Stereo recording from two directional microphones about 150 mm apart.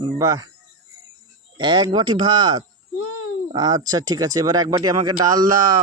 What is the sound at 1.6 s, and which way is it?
Speech, 30° right (ahead or behind).